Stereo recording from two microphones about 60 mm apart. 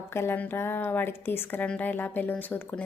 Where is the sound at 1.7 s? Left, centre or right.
Left.